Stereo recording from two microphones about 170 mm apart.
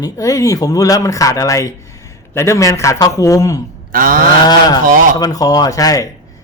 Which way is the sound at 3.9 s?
55° right (ahead or behind).